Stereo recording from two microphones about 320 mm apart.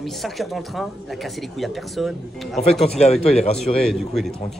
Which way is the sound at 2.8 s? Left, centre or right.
Centre.